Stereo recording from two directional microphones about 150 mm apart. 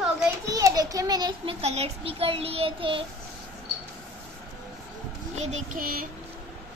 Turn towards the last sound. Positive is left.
turn(degrees=-70)  # may be behind; listen again after turning